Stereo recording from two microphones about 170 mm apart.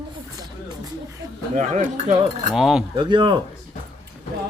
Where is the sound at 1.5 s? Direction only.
45° right (ahead or behind).